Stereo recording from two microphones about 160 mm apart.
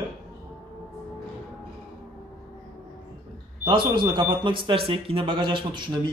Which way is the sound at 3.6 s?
30° right (ahead or behind).